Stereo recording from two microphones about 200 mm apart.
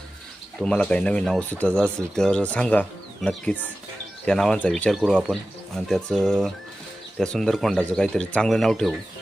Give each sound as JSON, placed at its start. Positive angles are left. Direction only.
{"t": 0.6, "sound": "speech", "side_deg": 5}